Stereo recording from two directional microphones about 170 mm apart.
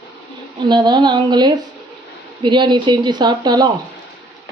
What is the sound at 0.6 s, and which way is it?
A woman's voice, 25° right (ahead or behind).